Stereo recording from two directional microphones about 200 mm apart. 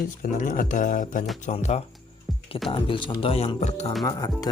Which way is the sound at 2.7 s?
25° left (ahead or behind).